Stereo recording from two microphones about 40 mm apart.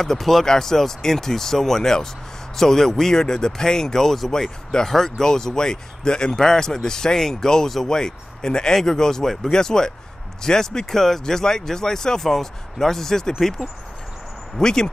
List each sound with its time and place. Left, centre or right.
0.0 s speech: centre
14.6 s speech: centre